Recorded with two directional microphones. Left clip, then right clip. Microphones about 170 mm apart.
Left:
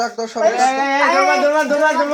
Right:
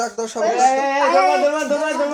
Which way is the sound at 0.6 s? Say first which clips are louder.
Even; 20° left (ahead or behind).